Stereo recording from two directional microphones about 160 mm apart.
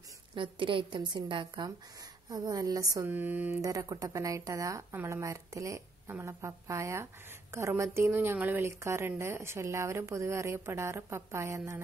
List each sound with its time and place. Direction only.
0.3 s a woman's voice: 30° right (ahead or behind); by 3.5 s 10° right (ahead or behind)
3.6 s a woman's voice: 20° right (ahead or behind)